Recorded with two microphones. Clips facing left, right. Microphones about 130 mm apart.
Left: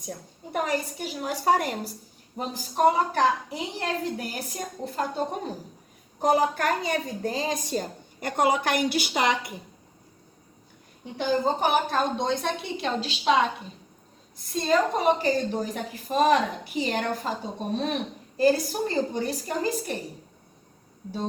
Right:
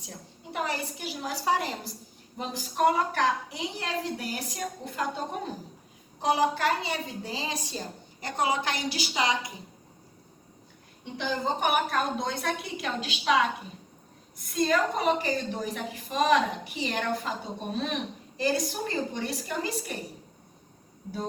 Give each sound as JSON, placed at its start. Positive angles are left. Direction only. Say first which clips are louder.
{"t": 0.0, "sound": "a woman's voice", "louder": "left 6 dB", "side_deg": 45}
{"t": 6.2, "sound": "a woman's voice", "louder": "left 2 dB", "side_deg": 45}
{"t": 11.2, "sound": "a woman's voice", "louder": "left 5 dB", "side_deg": 35}